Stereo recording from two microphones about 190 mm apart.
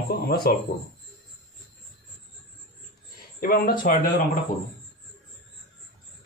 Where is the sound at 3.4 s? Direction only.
50° left (ahead or behind).